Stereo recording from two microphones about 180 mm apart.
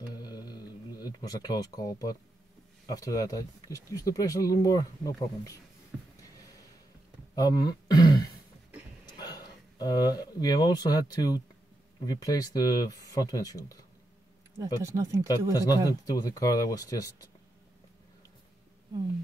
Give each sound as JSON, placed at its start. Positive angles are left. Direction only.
{"t": 0.1, "sound": "a sound", "side_deg": 20}
{"t": 2.9, "sound": "speech", "side_deg": 20}
{"t": 7.3, "sound": "throat clearing", "side_deg": 20}
{"t": 9.2, "sound": "speech", "side_deg": 20}
{"t": 14.6, "sound": "speech", "side_deg": -15}
{"t": 15.5, "sound": "speech", "side_deg": 20}